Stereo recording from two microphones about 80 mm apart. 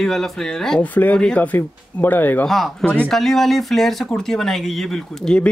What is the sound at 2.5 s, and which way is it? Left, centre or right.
Speech, centre.